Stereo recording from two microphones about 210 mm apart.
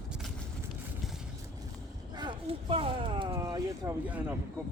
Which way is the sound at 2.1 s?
20° right (ahead or behind).